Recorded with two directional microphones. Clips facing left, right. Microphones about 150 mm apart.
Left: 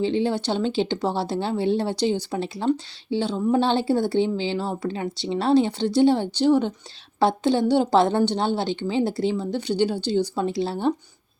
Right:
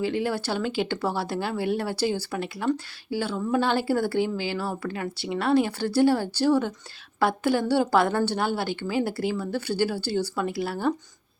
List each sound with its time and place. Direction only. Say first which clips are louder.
0.0 s a woman's voice: left 4 dB; 25° left (ahead or behind)